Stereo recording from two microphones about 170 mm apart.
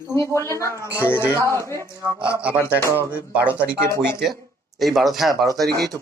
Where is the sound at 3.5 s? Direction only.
10° right (ahead or behind).